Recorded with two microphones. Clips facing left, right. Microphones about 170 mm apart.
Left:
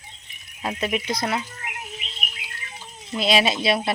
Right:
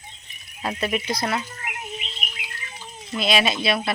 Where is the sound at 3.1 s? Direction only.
35° left (ahead or behind).